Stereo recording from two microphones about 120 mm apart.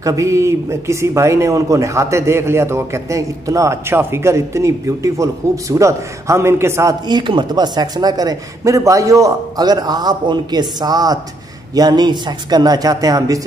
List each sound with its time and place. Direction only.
0.0 s speech: 25° right (ahead or behind)
7.1 s speech: 40° right (ahead or behind)